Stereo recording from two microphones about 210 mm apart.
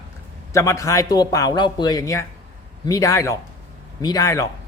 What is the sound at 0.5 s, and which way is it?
A man's voice, 15° left (ahead or behind).